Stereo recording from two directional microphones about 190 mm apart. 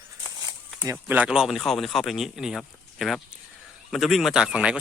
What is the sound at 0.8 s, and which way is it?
Speech, 15° right (ahead or behind).